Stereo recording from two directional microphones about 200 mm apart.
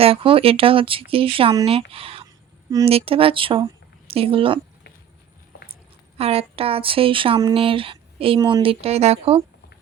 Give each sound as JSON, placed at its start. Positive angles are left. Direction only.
{"t": 0.0, "sound": "speech", "side_deg": -25}
{"t": 2.6, "sound": "speech", "side_deg": -20}
{"t": 2.9, "sound": "speech", "side_deg": -30}
{"t": 6.1, "sound": "speech", "side_deg": -30}